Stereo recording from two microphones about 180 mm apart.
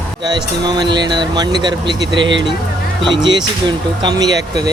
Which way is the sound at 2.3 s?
90° right.